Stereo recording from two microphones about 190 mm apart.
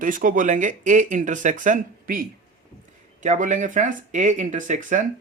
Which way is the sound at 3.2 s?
40° right (ahead or behind).